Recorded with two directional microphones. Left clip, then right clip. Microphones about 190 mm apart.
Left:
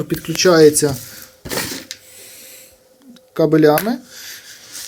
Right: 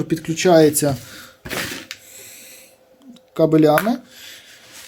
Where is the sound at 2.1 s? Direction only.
20° right (ahead or behind).